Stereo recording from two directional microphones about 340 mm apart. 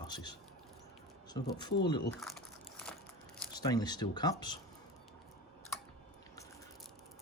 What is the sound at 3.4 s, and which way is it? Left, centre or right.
Speech, centre.